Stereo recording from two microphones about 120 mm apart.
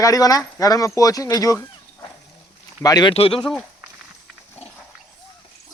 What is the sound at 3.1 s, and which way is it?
Speech, 55° left (ahead or behind).